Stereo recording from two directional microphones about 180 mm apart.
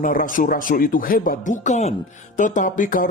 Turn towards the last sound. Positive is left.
turn(degrees=45)  # may be behind; listen again after turning